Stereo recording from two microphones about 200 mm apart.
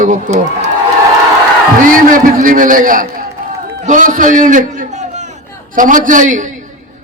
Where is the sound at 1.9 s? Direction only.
40° right (ahead or behind).